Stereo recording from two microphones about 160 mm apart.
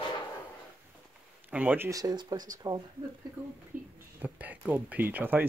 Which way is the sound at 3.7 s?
55° right (ahead or behind).